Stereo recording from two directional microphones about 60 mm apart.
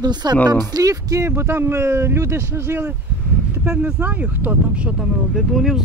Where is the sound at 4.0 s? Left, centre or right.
Right.